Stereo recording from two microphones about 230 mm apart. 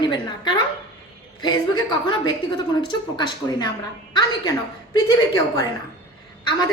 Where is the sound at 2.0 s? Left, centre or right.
Centre.